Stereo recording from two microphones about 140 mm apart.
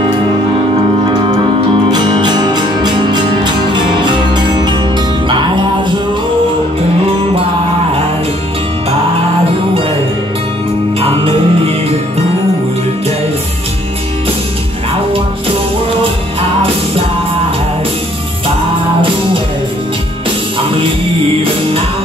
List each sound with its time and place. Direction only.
1.0 s music: 35° right (ahead or behind)
11.0 s music: 45° right (ahead or behind)